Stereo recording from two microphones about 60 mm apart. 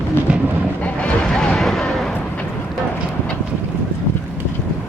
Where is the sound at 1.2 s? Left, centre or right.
Centre.